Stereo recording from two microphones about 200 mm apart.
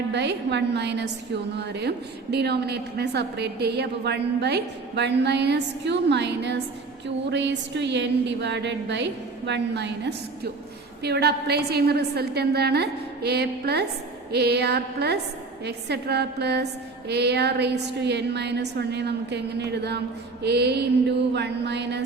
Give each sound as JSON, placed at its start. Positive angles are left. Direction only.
{"t": 0.1, "sound": "a woman's voice", "side_deg": -60}